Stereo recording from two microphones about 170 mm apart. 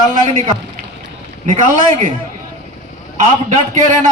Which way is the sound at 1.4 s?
50° right (ahead or behind).